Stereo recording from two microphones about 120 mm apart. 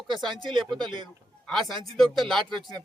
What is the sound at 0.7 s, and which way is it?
Speech, 40° right (ahead or behind).